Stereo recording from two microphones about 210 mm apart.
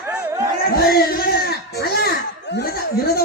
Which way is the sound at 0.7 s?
45° left (ahead or behind).